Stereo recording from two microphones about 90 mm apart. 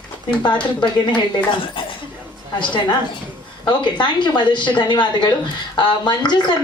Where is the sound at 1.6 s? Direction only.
75° left (ahead or behind).